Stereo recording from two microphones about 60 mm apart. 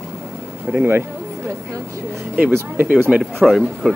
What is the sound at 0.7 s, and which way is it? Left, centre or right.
Speech, right.